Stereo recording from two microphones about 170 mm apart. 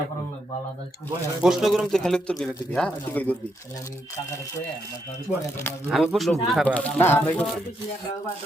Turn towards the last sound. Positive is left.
turn(degrees=10)  # may be behind; listen again after turning